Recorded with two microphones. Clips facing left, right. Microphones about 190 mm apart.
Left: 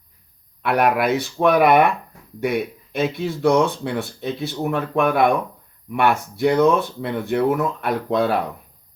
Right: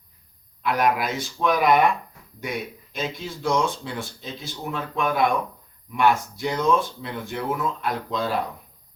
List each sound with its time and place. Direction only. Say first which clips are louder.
0.6 s speech: left 4 dB; 60° left (ahead or behind)